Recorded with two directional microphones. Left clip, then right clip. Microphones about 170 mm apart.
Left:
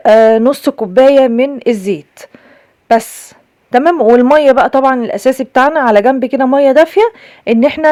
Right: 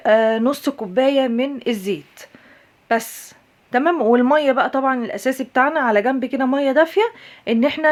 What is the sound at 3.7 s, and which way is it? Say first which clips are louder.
A woman's voice: left 8 dB; 45° left (ahead or behind).